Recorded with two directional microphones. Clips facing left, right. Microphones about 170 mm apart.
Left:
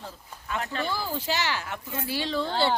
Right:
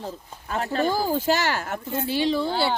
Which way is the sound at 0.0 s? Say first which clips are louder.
Right 7 dB; 40° right (ahead or behind).